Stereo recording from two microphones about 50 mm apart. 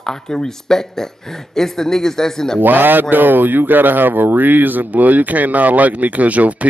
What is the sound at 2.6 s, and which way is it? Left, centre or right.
Speech, right.